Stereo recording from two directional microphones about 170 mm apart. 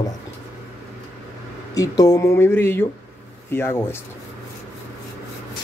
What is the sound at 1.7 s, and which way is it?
Speech, 20° left (ahead or behind).